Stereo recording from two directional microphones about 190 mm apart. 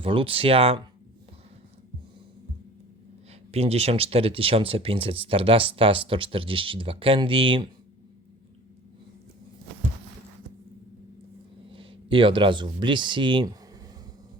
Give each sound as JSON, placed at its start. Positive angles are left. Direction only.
{"t": 0.0, "sound": "speech", "side_deg": -30}
{"t": 3.5, "sound": "speech", "side_deg": -30}
{"t": 11.7, "sound": "speech", "side_deg": -25}